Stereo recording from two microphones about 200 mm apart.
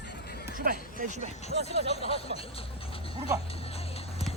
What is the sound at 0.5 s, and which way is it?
Speech, 40° right (ahead or behind).